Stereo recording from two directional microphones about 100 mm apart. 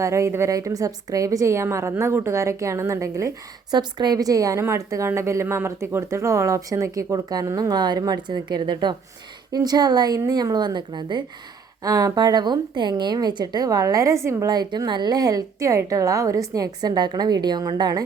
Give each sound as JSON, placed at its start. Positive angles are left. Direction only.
{"t": 0.0, "sound": "speech", "side_deg": -30}
{"t": 3.7, "sound": "speech", "side_deg": -45}
{"t": 11.8, "sound": "speech", "side_deg": -35}